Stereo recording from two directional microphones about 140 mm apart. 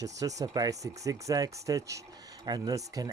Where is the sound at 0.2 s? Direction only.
25° right (ahead or behind).